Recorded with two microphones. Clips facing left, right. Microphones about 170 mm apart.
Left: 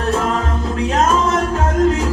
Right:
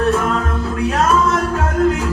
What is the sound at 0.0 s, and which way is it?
Music, 35° left (ahead or behind).